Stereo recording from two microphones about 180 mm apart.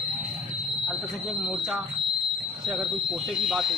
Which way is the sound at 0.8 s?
Centre (ahead or behind).